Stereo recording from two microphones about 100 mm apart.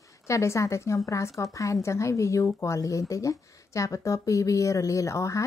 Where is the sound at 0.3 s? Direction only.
30° left (ahead or behind).